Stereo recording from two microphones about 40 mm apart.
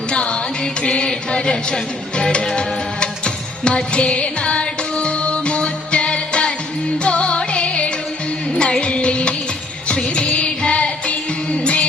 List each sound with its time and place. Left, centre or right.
0.1 s music: left